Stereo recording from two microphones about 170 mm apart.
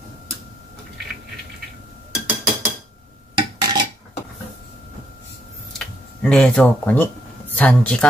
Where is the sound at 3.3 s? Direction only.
25° right (ahead or behind).